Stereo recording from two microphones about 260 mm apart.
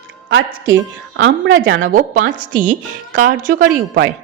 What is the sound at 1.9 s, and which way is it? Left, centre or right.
A woman's voice, right.